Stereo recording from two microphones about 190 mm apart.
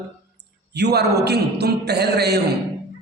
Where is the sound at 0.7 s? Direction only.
60° right (ahead or behind).